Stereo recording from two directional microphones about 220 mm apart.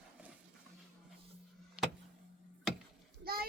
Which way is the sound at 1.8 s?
5° right (ahead or behind).